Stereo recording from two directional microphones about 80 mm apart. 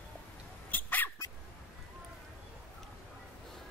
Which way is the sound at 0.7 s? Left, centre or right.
Left.